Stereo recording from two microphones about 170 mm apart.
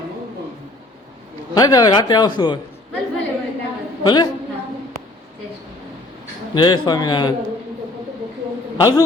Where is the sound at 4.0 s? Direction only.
25° left (ahead or behind).